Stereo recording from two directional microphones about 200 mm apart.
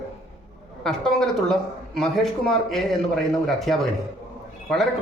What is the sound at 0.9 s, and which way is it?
A woman's voice, 5° left (ahead or behind).